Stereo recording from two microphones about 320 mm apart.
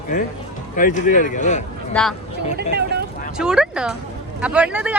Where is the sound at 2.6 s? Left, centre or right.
Right.